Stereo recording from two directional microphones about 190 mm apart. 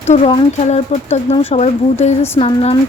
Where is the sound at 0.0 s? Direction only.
35° left (ahead or behind).